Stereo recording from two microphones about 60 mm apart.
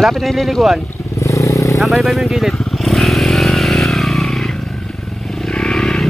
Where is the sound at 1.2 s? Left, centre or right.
Left.